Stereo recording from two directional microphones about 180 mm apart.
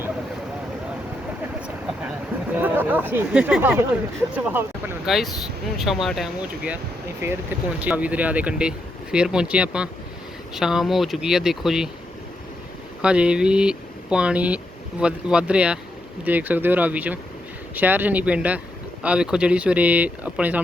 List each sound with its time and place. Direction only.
1.6 s a sound: 5° right (ahead or behind)
4.4 s speech: 10° right (ahead or behind)
7.2 s speech: 15° right (ahead or behind)
13.0 s speech: 5° right (ahead or behind)